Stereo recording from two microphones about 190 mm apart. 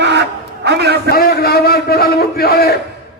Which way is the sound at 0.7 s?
60° right (ahead or behind).